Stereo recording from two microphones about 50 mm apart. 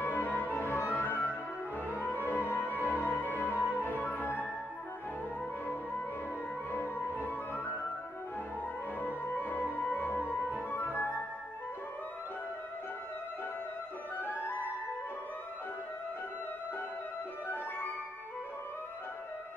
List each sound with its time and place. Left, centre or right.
0.0 s music: left
2.7 s music: right
3.0 s music: left
6.7 s music: left
9.0 s music: left
14.1 s flute: left